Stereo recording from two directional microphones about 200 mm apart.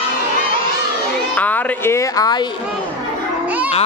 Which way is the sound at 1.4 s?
10° left (ahead or behind).